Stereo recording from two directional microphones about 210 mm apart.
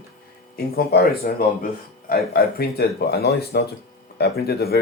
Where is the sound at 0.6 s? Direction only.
50° left (ahead or behind).